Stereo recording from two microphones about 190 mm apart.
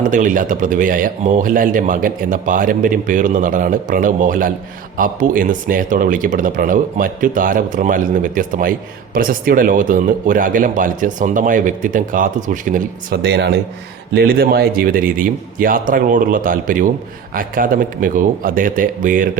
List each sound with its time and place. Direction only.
0.0 s speech: 45° right (ahead or behind)
13.3 s speech: 65° right (ahead or behind)
14.1 s speech: 55° right (ahead or behind)